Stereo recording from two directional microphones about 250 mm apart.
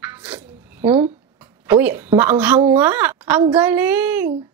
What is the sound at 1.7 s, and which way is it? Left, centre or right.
A woman's voice, centre.